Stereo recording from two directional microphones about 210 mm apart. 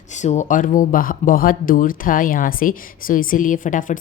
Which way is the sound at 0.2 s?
35° left (ahead or behind).